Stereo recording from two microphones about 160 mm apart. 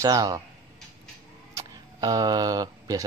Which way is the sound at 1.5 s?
25° right (ahead or behind).